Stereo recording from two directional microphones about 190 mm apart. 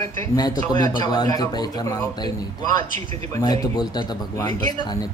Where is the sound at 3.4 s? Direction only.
20° left (ahead or behind).